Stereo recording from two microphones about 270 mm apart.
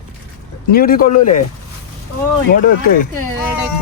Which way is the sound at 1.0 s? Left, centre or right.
Left.